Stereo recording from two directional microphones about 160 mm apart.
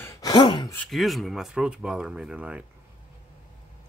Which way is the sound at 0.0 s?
20° left (ahead or behind).